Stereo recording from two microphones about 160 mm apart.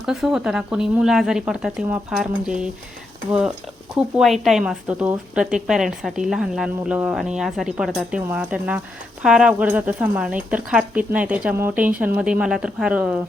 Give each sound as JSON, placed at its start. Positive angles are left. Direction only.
{"t": 0.0, "sound": "speech", "side_deg": -5}
{"t": 3.9, "sound": "speech", "side_deg": 0}